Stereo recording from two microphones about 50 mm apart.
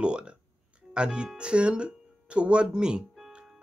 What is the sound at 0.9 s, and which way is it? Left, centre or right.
Speech, right.